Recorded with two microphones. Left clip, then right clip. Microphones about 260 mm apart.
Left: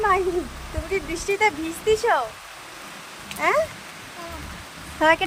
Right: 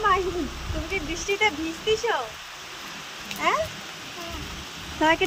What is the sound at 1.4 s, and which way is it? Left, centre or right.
Speech, centre.